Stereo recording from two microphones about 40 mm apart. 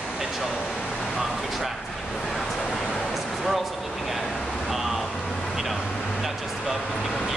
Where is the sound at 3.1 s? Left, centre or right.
Centre.